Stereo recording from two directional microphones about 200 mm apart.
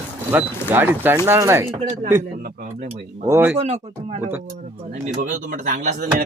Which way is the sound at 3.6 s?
35° right (ahead or behind).